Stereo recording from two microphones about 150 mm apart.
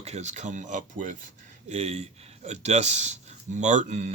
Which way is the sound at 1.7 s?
45° right (ahead or behind).